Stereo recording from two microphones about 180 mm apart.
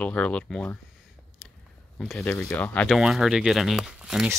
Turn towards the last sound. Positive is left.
turn(degrees=-5)  # may be behind; listen again after turning